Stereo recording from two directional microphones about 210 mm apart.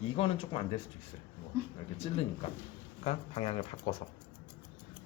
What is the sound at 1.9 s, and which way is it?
Speech, 30° left (ahead or behind).